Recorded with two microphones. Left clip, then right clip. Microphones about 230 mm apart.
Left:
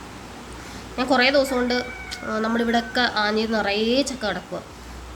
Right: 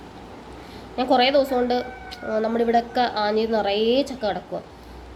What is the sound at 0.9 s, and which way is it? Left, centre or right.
A woman's voice, centre.